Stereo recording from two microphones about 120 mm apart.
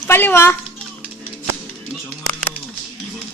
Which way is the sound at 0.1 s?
20° left (ahead or behind).